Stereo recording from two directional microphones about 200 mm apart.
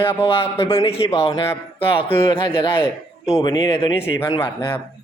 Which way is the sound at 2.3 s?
25° left (ahead or behind).